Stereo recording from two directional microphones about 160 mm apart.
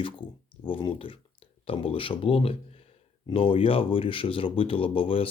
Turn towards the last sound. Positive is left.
turn(degrees=35)  # may be behind; listen again after turning